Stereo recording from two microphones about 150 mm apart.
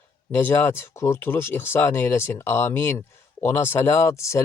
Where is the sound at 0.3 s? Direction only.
15° left (ahead or behind).